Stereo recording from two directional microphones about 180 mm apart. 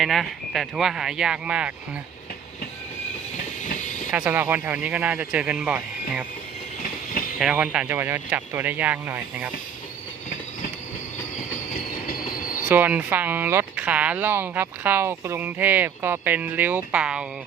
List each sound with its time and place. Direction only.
0.0 s speech: centre (ahead or behind)
3.6 s train: 45° left (ahead or behind)
4.1 s speech: 10° right (ahead or behind)
7.3 s speech: 5° right (ahead or behind)
12.6 s speech: 10° right (ahead or behind)